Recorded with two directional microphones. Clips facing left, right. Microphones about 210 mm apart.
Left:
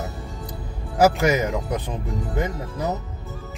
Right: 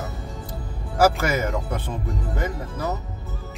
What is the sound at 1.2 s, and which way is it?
Music, 20° left (ahead or behind).